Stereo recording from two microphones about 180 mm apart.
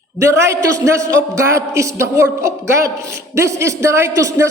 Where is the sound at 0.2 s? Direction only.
15° right (ahead or behind).